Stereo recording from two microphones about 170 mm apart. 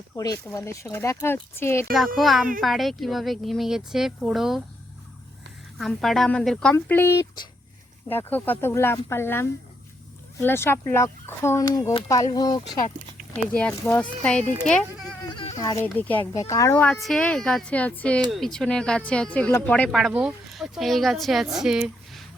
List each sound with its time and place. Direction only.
0.2 s speech: 20° left (ahead or behind)
2.1 s speech: centre (ahead or behind)
5.7 s speech: centre (ahead or behind); by 12.8 s 25° left (ahead or behind)
13.3 s speech: 5° left (ahead or behind)
15.5 s speech: 20° left (ahead or behind)
16.0 s speech: 10° left (ahead or behind)